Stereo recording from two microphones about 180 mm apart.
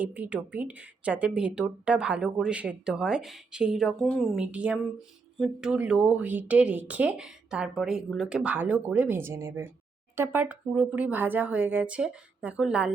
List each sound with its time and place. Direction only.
0.0 s speech: 10° right (ahead or behind)